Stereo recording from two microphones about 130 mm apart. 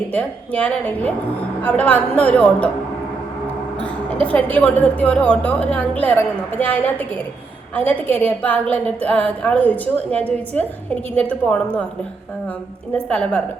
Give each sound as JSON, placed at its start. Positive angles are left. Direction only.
{"t": 0.1, "sound": "a woman's voice", "side_deg": 10}
{"t": 4.2, "sound": "a woman's voice", "side_deg": 10}
{"t": 12.9, "sound": "a woman's voice", "side_deg": 10}